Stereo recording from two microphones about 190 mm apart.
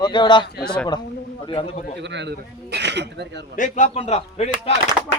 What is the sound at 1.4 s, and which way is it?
Speech, 30° left (ahead or behind).